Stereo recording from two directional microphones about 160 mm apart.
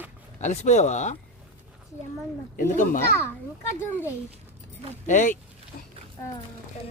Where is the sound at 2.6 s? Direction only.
55° left (ahead or behind).